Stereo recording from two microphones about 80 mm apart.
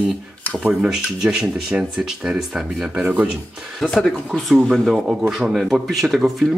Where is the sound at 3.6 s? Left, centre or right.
Centre.